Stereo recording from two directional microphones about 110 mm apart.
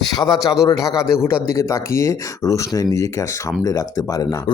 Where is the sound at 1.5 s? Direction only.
25° left (ahead or behind).